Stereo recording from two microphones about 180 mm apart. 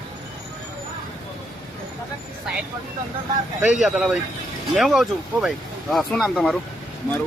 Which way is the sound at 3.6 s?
5° right (ahead or behind).